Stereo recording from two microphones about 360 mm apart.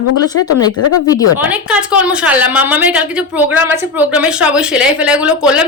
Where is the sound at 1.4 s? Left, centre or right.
Centre.